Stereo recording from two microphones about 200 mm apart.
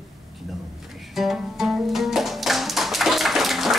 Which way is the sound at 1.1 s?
Centre (ahead or behind).